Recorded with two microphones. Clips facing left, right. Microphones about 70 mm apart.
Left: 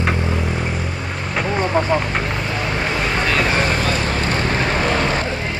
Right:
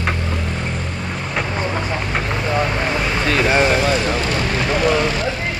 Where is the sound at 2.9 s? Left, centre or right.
Centre.